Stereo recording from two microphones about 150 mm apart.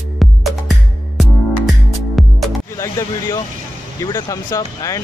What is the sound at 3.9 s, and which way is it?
Speech, 25° left (ahead or behind).